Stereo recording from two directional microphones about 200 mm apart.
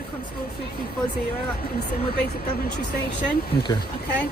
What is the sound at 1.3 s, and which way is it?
Speech, 50° left (ahead or behind).